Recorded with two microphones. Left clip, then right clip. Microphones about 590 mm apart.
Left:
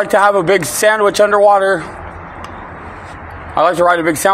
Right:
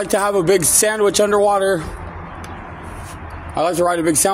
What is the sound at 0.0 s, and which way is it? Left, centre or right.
Speech, right.